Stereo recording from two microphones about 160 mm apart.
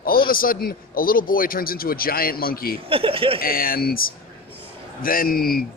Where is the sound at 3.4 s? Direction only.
65° left (ahead or behind).